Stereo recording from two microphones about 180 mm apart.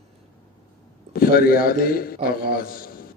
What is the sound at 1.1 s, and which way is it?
A man's voice, 55° left (ahead or behind).